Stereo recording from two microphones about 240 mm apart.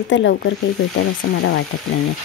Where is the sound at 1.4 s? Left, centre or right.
Left.